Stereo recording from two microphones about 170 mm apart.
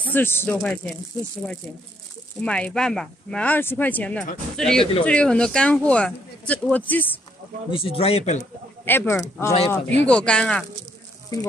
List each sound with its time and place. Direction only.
0.1 s speech: 15° left (ahead or behind)
2.4 s speech: 5° left (ahead or behind)
7.7 s speech: 35° left (ahead or behind)
8.8 s speech: 15° left (ahead or behind)